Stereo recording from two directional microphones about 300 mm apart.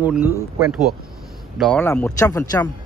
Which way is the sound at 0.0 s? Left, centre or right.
Centre.